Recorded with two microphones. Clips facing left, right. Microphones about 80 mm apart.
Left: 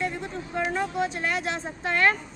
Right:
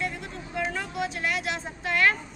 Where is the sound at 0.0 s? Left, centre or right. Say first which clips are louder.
Left 3 dB; left.